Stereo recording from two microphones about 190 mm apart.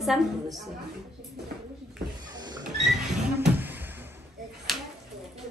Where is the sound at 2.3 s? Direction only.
20° right (ahead or behind).